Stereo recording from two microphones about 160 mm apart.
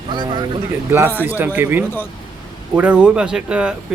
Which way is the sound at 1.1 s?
10° left (ahead or behind).